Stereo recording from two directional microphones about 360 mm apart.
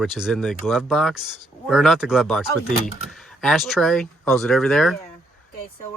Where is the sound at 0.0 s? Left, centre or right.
Centre.